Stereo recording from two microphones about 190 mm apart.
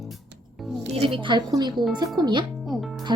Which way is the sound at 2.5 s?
Centre (ahead or behind).